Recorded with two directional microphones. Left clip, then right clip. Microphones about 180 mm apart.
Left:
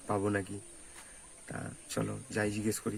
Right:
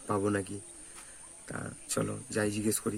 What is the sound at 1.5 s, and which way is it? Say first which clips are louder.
Speech: right 3 dB; 15° right (ahead or behind).